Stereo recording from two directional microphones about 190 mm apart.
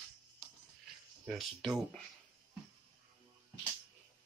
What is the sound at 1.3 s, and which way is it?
Speech, centre (ahead or behind).